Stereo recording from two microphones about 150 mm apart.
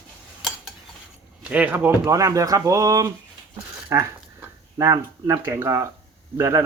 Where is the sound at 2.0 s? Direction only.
20° right (ahead or behind).